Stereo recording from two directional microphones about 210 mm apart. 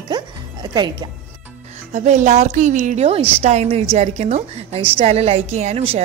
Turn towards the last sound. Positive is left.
turn(degrees=-30)  # may be behind; listen again after turning